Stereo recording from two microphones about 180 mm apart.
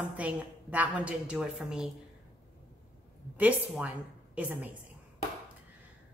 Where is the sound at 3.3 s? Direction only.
10° right (ahead or behind).